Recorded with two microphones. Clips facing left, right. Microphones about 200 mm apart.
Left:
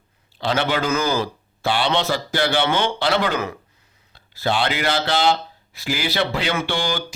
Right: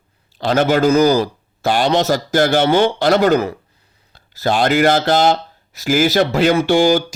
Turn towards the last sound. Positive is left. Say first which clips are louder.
# right 11 dB
turn(degrees=-45)  # may be behind; listen again after turning